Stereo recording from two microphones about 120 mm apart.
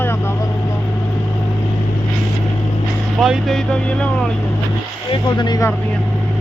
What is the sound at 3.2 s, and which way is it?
Speech, centre (ahead or behind).